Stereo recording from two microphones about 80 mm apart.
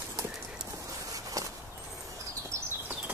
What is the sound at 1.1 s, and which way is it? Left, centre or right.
Walk, right.